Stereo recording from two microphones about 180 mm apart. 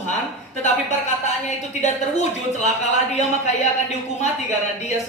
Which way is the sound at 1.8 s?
40° left (ahead or behind).